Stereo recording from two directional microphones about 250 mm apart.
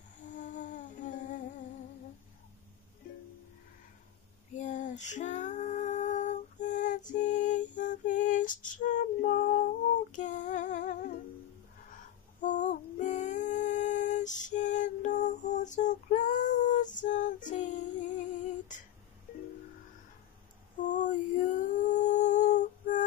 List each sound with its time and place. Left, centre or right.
0.2 s music: left
4.6 s female singing: left
7.1 s lullaby: left
11.9 s female singing: left
20.9 s humming: left